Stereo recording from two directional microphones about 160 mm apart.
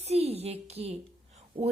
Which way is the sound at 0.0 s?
40° right (ahead or behind).